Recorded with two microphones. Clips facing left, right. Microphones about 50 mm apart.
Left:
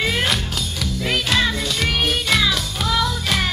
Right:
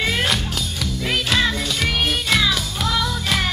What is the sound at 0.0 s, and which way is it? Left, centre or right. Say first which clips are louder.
Music: even; centre.